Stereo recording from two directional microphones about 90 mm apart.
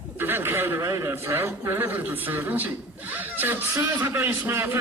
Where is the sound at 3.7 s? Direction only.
40° right (ahead or behind).